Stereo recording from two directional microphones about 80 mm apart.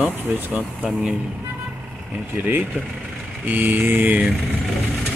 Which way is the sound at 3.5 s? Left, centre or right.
Right.